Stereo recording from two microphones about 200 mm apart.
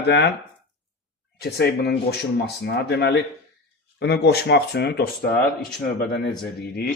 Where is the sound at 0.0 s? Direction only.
60° left (ahead or behind).